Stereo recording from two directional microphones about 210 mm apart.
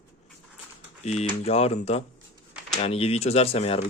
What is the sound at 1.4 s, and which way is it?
Speech, 30° left (ahead or behind).